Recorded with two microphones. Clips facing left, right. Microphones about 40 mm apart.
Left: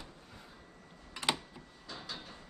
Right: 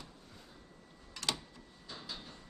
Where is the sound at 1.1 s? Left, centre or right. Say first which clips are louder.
Left 4 dB; left.